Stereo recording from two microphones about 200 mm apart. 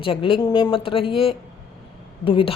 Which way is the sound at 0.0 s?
25° left (ahead or behind).